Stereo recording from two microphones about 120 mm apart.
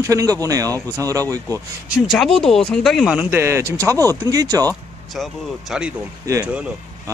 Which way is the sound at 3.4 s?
20° right (ahead or behind).